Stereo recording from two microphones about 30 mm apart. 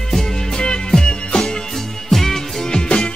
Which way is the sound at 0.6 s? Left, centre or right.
Left.